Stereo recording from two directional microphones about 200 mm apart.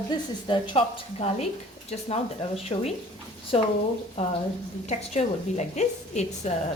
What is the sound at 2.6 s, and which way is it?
Speech, 30° left (ahead or behind).